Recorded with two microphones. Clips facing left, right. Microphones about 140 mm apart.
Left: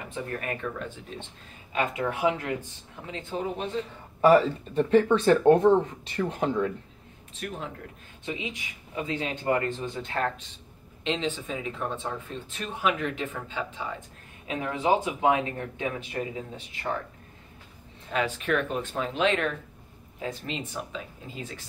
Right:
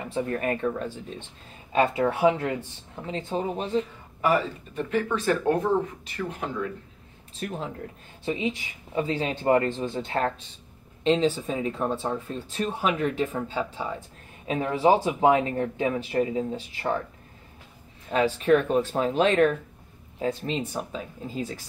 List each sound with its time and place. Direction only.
0.1 s speech: 35° right (ahead or behind)
4.2 s speech: 30° left (ahead or behind)
7.3 s speech: 30° right (ahead or behind)
18.1 s speech: 35° right (ahead or behind)